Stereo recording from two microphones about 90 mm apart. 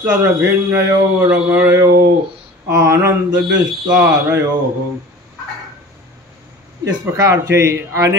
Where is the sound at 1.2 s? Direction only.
15° right (ahead or behind).